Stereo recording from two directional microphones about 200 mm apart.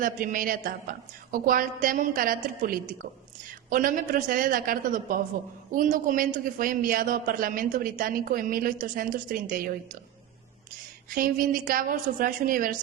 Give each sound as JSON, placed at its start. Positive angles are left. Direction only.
{"t": 0.0, "sound": "a man's voice", "side_deg": -45}
{"t": 11.1, "sound": "a man's voice", "side_deg": -45}